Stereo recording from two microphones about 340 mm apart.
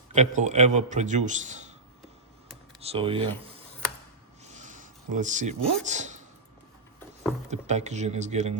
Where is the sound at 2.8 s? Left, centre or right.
Centre.